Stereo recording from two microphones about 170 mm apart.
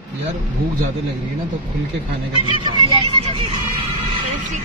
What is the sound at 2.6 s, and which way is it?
Speech, 30° right (ahead or behind).